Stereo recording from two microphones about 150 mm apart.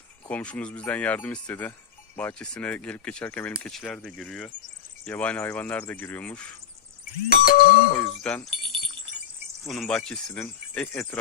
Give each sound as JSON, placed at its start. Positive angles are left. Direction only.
{"t": 0.3, "sound": "speech", "side_deg": 10}
{"t": 7.3, "sound": "ding", "side_deg": 80}
{"t": 7.9, "sound": "speech", "side_deg": 10}
{"t": 8.6, "sound": "wind chime", "side_deg": -35}
{"t": 9.6, "sound": "speech", "side_deg": 0}